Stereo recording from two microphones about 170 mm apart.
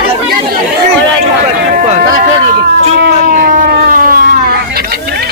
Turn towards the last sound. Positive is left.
turn(degrees=-55)  # may be behind; listen again after turning